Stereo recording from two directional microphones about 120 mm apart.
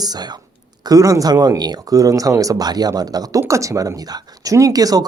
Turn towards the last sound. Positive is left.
turn(degrees=-30)  # may be behind; listen again after turning